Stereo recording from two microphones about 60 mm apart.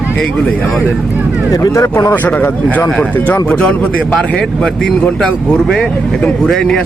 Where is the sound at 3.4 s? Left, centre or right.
Centre.